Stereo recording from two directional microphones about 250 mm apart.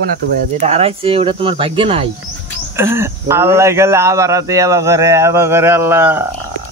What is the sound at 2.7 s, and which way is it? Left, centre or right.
Speech, centre.